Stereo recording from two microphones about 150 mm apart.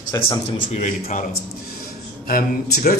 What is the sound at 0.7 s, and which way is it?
Speech, 50° left (ahead or behind).